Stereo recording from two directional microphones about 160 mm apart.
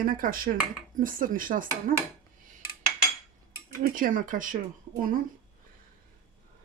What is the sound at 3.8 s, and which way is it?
A woman's voice, 60° right (ahead or behind).